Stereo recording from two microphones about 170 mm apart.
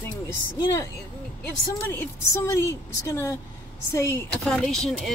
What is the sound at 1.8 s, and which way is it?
A woman's voice, 10° left (ahead or behind).